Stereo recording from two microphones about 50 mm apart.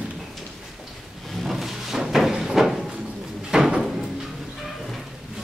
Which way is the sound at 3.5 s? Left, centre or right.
Centre.